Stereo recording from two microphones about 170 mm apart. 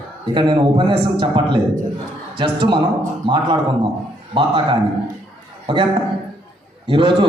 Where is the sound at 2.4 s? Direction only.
30° right (ahead or behind).